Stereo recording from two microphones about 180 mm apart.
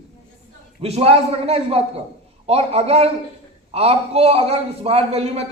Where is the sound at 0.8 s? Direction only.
35° right (ahead or behind).